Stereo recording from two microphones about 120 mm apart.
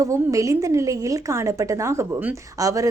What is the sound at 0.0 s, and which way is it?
Speech, 25° right (ahead or behind).